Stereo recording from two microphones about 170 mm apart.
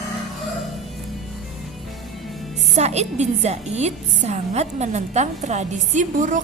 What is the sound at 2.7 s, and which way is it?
A woman's voice, 40° right (ahead or behind).